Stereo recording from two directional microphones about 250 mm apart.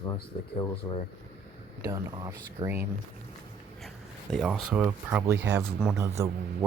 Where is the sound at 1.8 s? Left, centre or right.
Centre.